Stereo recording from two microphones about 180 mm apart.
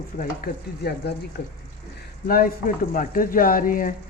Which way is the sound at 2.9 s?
50° left (ahead or behind).